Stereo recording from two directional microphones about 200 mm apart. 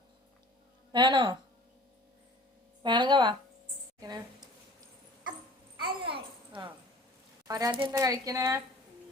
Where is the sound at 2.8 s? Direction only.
25° right (ahead or behind).